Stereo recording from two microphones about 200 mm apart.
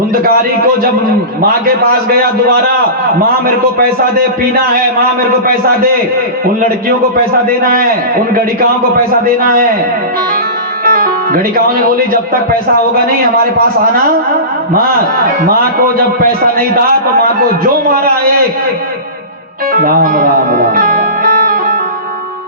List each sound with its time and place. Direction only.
1.4 s a man's voice: 45° right (ahead or behind)
7.4 s a man's voice: 45° right (ahead or behind)
9.2 s a man's voice: 45° right (ahead or behind)
10.8 s speech: 45° right (ahead or behind)
17.8 s a man's voice: 45° right (ahead or behind)
19.8 s music: 50° right (ahead or behind)